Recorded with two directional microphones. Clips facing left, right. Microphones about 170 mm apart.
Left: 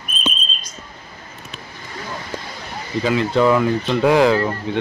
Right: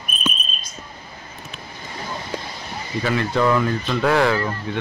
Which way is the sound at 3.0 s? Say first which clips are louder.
Left 4 dB; 15° left (ahead or behind).